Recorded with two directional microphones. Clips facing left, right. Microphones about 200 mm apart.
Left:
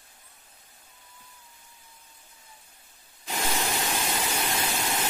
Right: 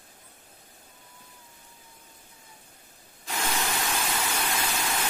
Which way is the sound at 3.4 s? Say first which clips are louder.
Left 1 dB; 20° left (ahead or behind).